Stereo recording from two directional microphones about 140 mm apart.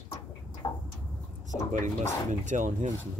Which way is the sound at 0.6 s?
30° left (ahead or behind).